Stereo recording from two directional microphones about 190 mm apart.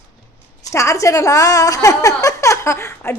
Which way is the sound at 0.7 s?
15° left (ahead or behind).